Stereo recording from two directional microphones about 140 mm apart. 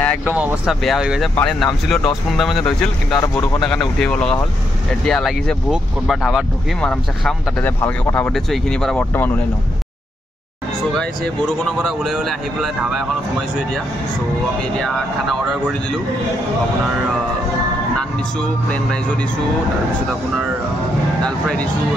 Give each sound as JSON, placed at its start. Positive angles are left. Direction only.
{"t": 0.2, "sound": "speech", "side_deg": -10}
{"t": 0.7, "sound": "speech", "side_deg": 0}
{"t": 3.2, "sound": "speech", "side_deg": 25}
{"t": 4.0, "sound": "speech", "side_deg": 5}
{"t": 11.0, "sound": "speech", "side_deg": 5}
{"t": 17.9, "sound": "speech", "side_deg": 5}
{"t": 21.2, "sound": "speech", "side_deg": 5}